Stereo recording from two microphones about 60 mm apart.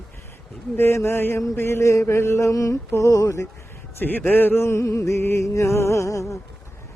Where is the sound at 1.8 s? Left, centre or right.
Left.